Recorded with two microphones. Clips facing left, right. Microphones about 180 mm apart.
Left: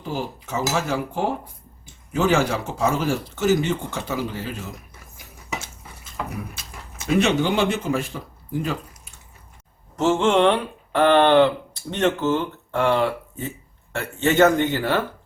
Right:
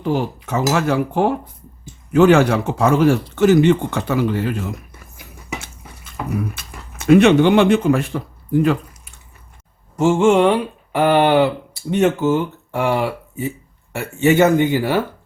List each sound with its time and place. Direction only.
0.0 s speech: 65° right (ahead or behind)
6.6 s speech: 60° right (ahead or behind)
10.0 s speech: 10° right (ahead or behind)